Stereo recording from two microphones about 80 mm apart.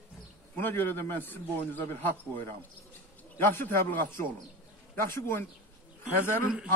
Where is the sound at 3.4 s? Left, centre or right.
Left.